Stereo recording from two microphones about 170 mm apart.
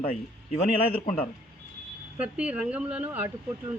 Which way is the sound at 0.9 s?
35° left (ahead or behind).